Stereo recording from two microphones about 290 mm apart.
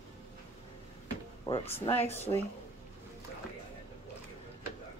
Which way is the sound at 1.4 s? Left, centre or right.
Centre.